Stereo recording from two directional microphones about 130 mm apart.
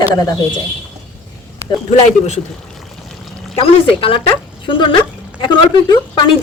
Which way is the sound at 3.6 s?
45° left (ahead or behind).